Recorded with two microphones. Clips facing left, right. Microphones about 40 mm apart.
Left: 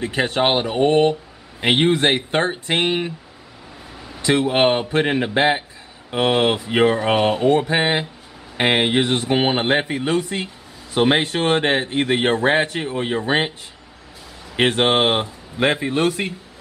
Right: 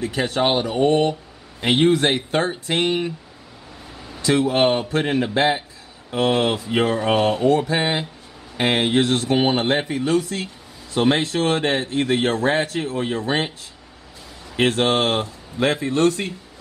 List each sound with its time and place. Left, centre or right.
0.0 s speech: centre
4.2 s a man's voice: centre
14.6 s speech: left